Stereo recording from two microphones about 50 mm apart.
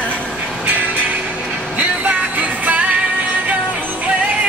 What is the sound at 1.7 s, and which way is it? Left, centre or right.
Music, right.